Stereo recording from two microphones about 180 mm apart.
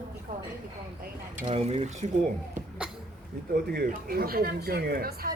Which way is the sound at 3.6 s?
60° right (ahead or behind).